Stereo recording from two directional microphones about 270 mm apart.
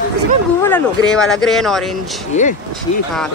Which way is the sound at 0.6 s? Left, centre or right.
Centre.